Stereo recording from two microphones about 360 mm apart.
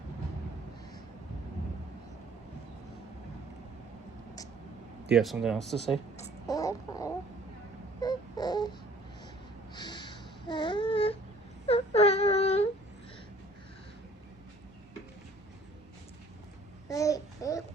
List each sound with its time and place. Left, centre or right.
5.1 s speech: centre
6.1 s a sound: centre
8.0 s baby cry: centre
9.7 s a sound: centre
11.6 s whimper: centre
16.9 s babbling: centre